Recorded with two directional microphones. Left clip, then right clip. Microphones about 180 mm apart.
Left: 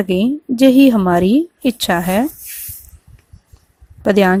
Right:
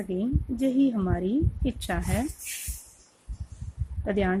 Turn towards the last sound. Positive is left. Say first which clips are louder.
# left 15 dB
turn(degrees=40)  # may be behind; listen again after turning